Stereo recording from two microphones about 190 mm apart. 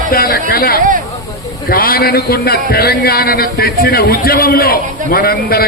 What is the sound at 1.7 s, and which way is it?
A man's voice, 50° left (ahead or behind).